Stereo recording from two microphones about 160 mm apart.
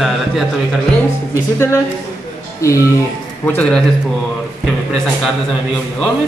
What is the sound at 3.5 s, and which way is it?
Speech, 5° left (ahead or behind).